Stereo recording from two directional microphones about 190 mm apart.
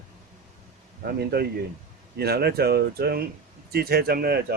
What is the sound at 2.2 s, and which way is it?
Speech, 55° right (ahead or behind).